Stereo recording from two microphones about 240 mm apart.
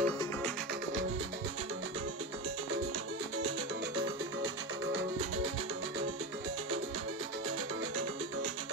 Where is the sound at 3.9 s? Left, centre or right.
Right.